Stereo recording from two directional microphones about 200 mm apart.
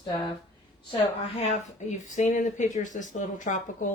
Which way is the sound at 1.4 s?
35° left (ahead or behind).